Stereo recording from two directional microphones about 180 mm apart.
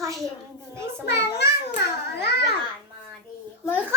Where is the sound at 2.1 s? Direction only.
65° left (ahead or behind).